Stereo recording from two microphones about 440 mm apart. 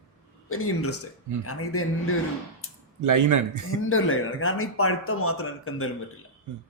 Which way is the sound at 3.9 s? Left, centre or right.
Left.